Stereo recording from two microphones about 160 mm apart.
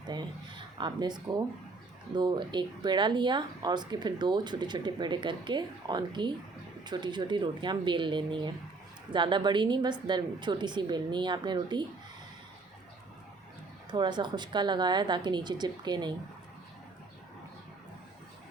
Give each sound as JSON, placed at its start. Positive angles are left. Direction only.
{"t": 0.1, "sound": "speech", "side_deg": -30}
{"t": 13.9, "sound": "speech", "side_deg": -30}